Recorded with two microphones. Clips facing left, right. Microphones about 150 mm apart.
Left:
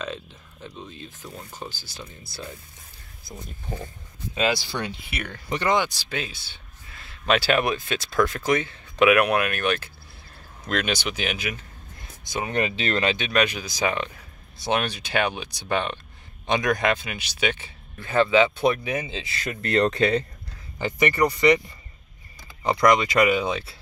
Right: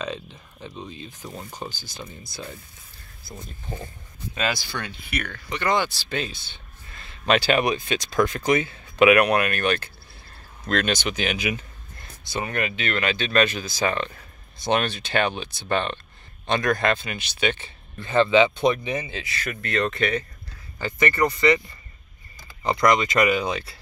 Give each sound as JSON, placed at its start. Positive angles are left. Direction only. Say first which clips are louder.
{"t": 0.0, "sound": "speech", "louder": "right 2 dB", "side_deg": 0}
{"t": 1.2, "sound": "speech", "louder": "right 3 dB", "side_deg": -20}
{"t": 1.6, "sound": "speech", "louder": "right 2 dB", "side_deg": 0}
{"t": 3.3, "sound": "speech", "louder": "left 1 dB", "side_deg": 15}
{"t": 12.0, "sound": "a sound", "louder": "even", "side_deg": 15}
{"t": 12.5, "sound": "speech", "louder": "left 4 dB", "side_deg": 30}
{"t": 13.1, "sound": "speech", "louder": "right 2 dB", "side_deg": 15}
{"t": 19.0, "sound": "speech", "louder": "even", "side_deg": 25}
{"t": 20.8, "sound": "speech", "louder": "left 1 dB", "side_deg": 15}